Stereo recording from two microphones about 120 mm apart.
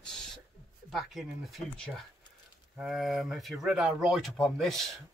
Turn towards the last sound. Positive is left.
turn(degrees=5)  # may be behind; listen again after turning